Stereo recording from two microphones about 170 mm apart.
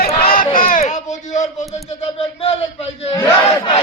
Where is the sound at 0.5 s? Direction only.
50° left (ahead or behind).